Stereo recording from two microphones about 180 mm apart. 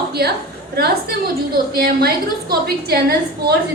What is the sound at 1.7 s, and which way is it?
A woman's voice, 60° right (ahead or behind).